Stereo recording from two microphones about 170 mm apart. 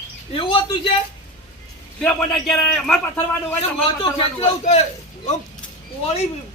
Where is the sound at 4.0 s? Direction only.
30° left (ahead or behind).